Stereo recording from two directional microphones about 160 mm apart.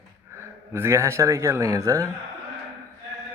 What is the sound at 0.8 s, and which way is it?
Speech, 15° right (ahead or behind).